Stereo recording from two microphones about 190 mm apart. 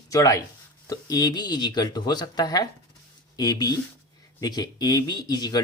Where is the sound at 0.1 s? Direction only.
20° left (ahead or behind).